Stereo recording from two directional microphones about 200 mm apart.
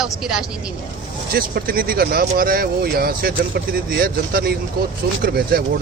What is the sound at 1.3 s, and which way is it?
Speech, 45° right (ahead or behind).